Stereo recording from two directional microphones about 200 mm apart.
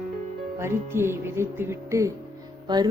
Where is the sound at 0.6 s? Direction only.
10° right (ahead or behind).